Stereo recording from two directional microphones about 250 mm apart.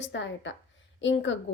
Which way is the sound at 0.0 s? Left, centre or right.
Left.